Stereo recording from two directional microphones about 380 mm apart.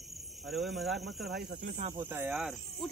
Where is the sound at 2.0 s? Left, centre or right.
Centre.